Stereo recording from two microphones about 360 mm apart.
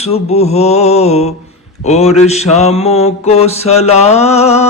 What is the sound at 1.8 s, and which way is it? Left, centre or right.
Mantra, centre.